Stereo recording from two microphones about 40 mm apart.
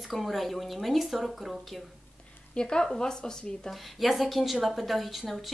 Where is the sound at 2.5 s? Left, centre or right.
Left.